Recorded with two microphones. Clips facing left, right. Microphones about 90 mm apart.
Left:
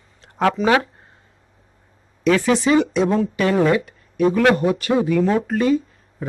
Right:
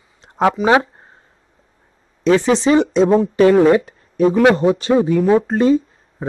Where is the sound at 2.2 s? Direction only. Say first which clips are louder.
Right 3 dB; 25° right (ahead or behind).